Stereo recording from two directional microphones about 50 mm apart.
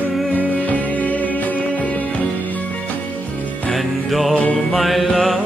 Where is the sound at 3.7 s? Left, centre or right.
Centre.